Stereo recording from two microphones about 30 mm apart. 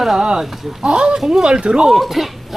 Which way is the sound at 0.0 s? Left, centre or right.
Centre.